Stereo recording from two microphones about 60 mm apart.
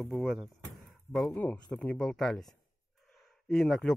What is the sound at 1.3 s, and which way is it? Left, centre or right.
Speech, left.